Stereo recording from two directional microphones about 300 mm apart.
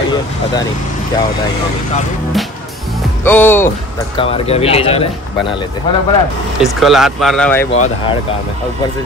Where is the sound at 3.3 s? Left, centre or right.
Centre.